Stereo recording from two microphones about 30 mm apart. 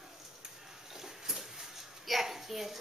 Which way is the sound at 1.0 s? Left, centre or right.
Centre.